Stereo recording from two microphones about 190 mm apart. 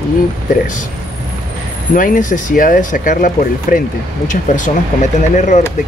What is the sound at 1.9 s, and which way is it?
Speech, 45° left (ahead or behind).